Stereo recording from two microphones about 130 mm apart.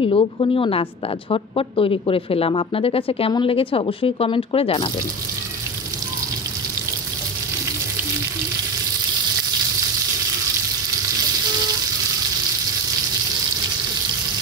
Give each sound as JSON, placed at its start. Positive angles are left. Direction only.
{"t": 0.0, "sound": "speech", "side_deg": 40}